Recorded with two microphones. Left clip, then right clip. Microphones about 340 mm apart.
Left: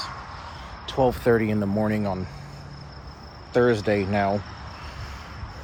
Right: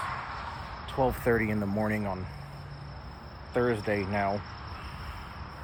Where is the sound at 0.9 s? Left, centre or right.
Left.